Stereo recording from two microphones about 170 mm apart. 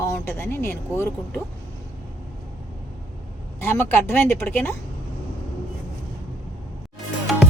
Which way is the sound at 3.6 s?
15° left (ahead or behind).